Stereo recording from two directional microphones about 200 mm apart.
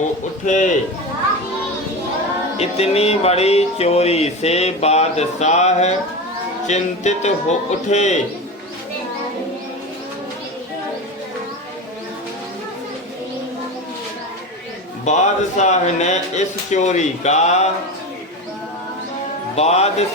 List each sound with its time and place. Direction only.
0.4 s music: 40° left (ahead or behind)
2.6 s music: 30° left (ahead or behind)
15.0 s music: 35° left (ahead or behind)
19.5 s music: 30° left (ahead or behind)